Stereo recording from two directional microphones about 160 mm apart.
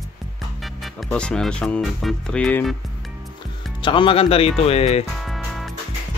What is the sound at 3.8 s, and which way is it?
Speech, 30° left (ahead or behind).